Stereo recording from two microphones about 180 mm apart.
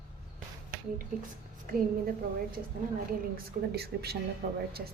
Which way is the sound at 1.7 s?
50° right (ahead or behind).